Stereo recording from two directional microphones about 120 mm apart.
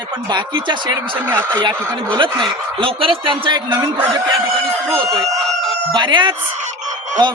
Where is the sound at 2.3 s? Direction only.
45° right (ahead or behind).